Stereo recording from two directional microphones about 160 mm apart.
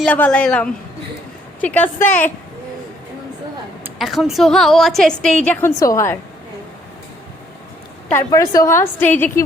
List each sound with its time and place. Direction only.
0.0 s a woman's voice: 10° left (ahead or behind)
3.9 s a woman's voice: centre (ahead or behind); by 6.1 s 20° left (ahead or behind)
8.1 s a woman's voice: 20° left (ahead or behind)